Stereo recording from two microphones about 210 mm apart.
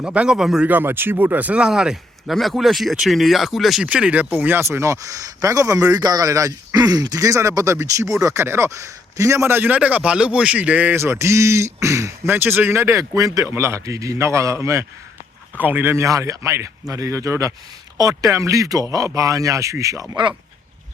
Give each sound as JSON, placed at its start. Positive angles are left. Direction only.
{"t": 0.0, "sound": "speech", "side_deg": -5}